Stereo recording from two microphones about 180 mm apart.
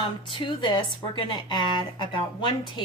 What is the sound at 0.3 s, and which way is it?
A woman's voice, 30° left (ahead or behind).